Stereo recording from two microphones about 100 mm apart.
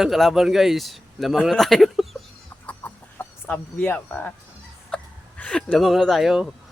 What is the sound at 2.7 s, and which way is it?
Chicken, 15° left (ahead or behind).